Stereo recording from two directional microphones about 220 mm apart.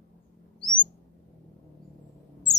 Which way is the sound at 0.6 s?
20° left (ahead or behind).